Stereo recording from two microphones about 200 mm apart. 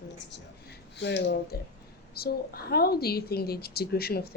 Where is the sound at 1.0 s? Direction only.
60° left (ahead or behind).